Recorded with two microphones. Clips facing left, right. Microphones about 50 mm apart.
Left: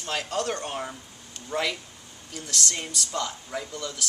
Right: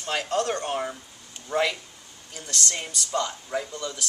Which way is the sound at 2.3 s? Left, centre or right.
Centre.